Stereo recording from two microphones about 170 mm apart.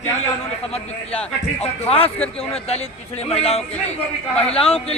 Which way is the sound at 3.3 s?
35° left (ahead or behind).